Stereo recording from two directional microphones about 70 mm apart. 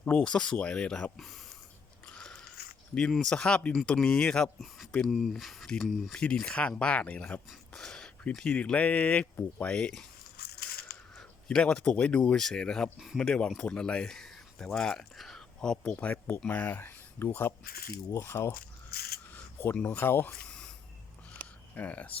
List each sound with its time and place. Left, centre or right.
0.0 s speech: left
2.0 s biting: centre
3.1 s speech: centre
5.0 s speech: centre
6.1 s speech: centre
11.4 s speech: centre
16.1 s speech: left
19.7 s speech: centre
20.0 s speech: left
21.8 s speech: left